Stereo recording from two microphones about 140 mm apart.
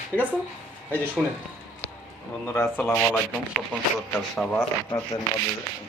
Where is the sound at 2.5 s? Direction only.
10° left (ahead or behind).